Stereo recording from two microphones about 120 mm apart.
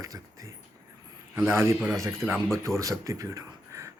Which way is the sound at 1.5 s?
20° right (ahead or behind).